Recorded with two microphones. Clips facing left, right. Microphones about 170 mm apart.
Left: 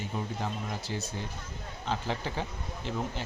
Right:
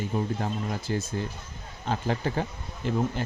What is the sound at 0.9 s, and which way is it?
A man's voice, 55° right (ahead or behind).